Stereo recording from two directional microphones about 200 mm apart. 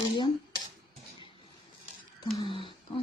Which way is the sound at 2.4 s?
25° left (ahead or behind).